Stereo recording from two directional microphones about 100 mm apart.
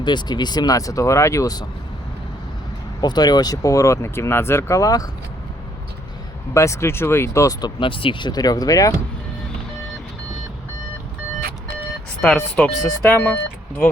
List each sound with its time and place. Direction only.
0.0 s speech: 45° left (ahead or behind)
3.0 s speech: 45° left (ahead or behind)
6.5 s speech: 30° left (ahead or behind)
7.6 s speech: 55° left (ahead or behind)
8.3 s speech: 40° left (ahead or behind)
12.2 s speech: 15° left (ahead or behind)